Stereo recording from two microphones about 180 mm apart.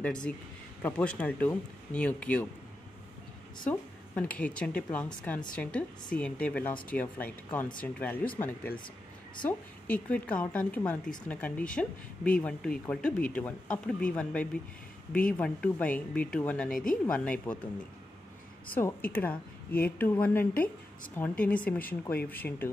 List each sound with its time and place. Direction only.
0.0 s a woman's voice: 5° left (ahead or behind)
3.6 s a woman's voice: 10° left (ahead or behind)
18.7 s a woman's voice: 10° left (ahead or behind)